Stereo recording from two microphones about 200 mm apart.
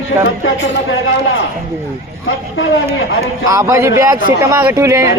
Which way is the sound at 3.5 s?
15° right (ahead or behind).